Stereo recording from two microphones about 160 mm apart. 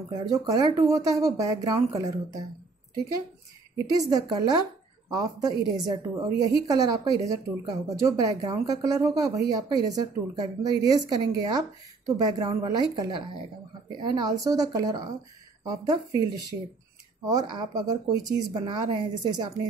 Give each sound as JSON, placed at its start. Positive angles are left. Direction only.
{"t": 0.1, "sound": "speech", "side_deg": -20}
{"t": 3.7, "sound": "speech", "side_deg": -20}
{"t": 17.3, "sound": "speech", "side_deg": -25}